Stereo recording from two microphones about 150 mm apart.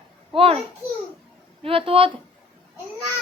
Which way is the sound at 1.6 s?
40° right (ahead or behind).